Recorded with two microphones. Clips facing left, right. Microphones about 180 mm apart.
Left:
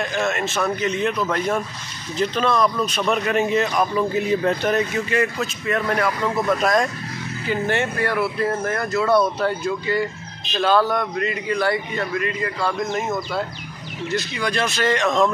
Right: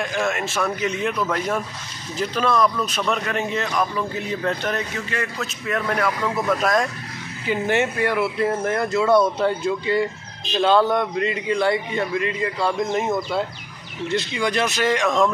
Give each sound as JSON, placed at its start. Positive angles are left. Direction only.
{"t": 0.0, "sound": "a man's voice", "side_deg": -5}
{"t": 7.4, "sound": "a man's voice", "side_deg": -15}
{"t": 14.0, "sound": "speech", "side_deg": -25}